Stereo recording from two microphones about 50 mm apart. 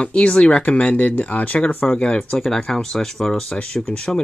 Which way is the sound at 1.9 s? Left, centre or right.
Left.